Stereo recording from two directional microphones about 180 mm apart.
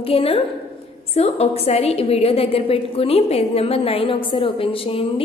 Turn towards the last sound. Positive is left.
turn(degrees=30)  # may be behind; listen again after turning